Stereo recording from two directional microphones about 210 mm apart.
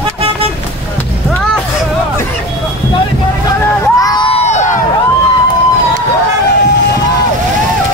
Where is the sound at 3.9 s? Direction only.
20° left (ahead or behind).